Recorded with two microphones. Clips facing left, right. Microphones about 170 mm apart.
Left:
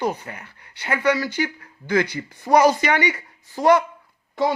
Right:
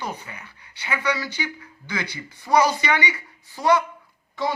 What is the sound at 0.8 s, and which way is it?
Speech, 50° left (ahead or behind).